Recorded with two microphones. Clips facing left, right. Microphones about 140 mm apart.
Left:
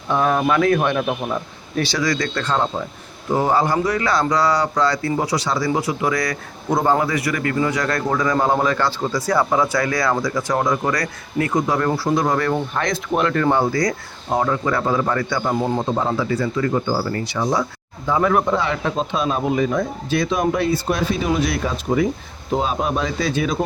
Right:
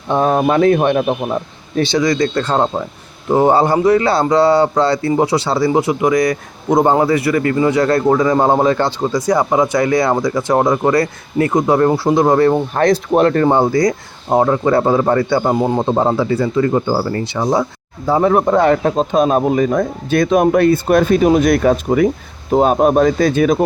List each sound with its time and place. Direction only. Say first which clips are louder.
0.1 s speech: right 4 dB; 30° right (ahead or behind)
16.8 s speech: right 4 dB; 40° right (ahead or behind)
18.4 s speech: right 8 dB; 50° right (ahead or behind)